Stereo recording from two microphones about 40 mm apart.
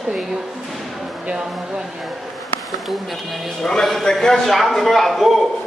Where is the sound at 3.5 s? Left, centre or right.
Centre.